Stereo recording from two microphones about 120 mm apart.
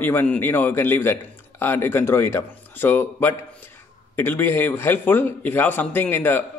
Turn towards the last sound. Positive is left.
turn(degrees=15)  # may be behind; listen again after turning